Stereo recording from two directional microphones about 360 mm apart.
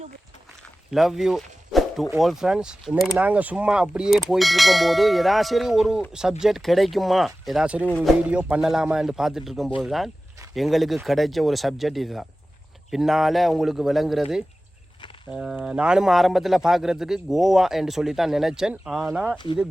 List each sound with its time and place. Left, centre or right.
0.9 s speech: centre